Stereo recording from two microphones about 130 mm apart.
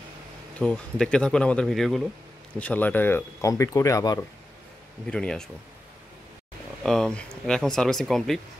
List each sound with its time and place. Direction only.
0.6 s speech: 5° left (ahead or behind)
2.6 s speech: 10° left (ahead or behind); by 4.2 s 30° left (ahead or behind)
5.0 s speech: 5° left (ahead or behind)
6.8 s speech: 5° left (ahead or behind)